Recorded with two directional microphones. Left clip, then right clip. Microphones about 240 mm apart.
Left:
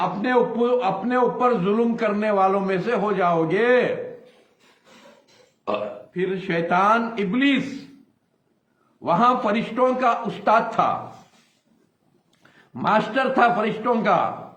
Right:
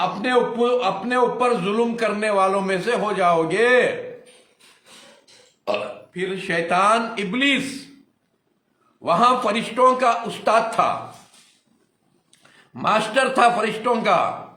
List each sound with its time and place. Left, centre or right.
0.0 s a man's voice: centre
6.1 s a man's voice: centre
9.0 s a man's voice: centre
12.7 s a man's voice: centre